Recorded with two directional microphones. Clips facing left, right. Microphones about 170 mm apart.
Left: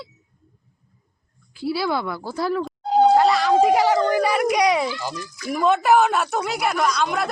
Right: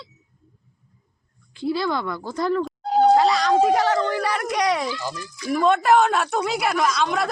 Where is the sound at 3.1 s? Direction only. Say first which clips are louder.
Left 1 dB; centre (ahead or behind).